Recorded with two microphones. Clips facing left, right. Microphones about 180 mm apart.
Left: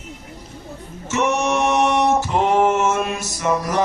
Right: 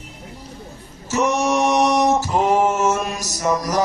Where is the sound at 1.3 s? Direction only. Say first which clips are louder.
Right 1 dB; 35° right (ahead or behind).